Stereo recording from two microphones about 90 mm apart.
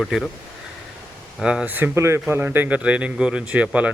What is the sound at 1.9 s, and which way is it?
Speech, 30° right (ahead or behind).